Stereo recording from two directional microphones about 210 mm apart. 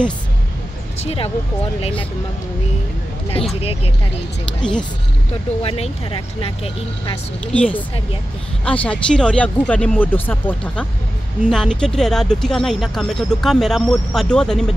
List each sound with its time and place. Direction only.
0.9 s speech: 30° left (ahead or behind)
4.6 s speech: 5° left (ahead or behind)
5.6 s speech: 25° left (ahead or behind)
7.5 s speech: 5° left (ahead or behind)